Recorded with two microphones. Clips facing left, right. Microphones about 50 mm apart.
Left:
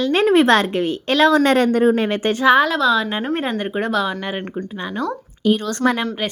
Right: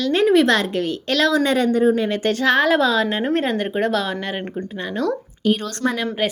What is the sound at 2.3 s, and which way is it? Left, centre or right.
Speech, centre.